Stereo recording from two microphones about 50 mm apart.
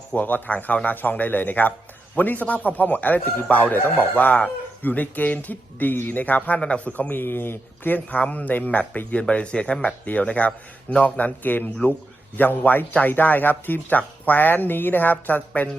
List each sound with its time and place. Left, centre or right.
0.2 s speech: left
7.1 s speech: left
8.3 s speech: left
9.3 s speech: left